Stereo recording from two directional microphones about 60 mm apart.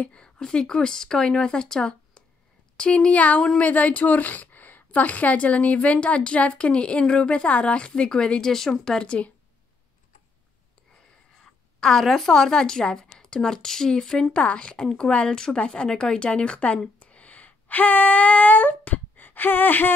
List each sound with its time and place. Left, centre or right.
0.0 s speech: centre
11.4 s speech: centre
17.0 s a sound: left